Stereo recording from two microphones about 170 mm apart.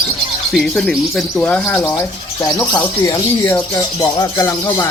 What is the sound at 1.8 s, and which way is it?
Speech, 15° left (ahead or behind).